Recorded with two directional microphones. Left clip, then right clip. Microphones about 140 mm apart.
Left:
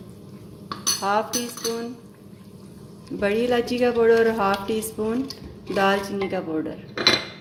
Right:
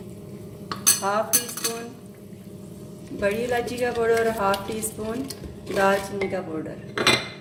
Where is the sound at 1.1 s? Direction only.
35° left (ahead or behind).